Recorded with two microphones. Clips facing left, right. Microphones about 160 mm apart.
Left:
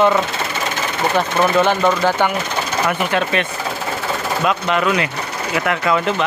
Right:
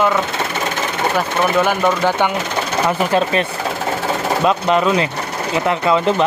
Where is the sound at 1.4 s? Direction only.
10° right (ahead or behind).